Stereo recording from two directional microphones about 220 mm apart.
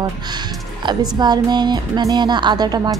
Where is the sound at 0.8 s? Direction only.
20° right (ahead or behind).